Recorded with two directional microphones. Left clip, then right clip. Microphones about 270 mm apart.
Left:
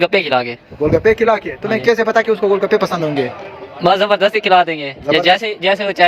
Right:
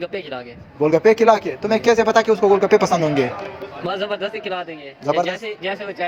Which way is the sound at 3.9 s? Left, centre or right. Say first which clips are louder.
Left 12 dB; left.